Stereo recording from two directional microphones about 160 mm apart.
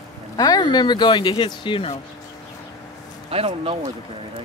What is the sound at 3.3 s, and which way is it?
Speech, 40° right (ahead or behind).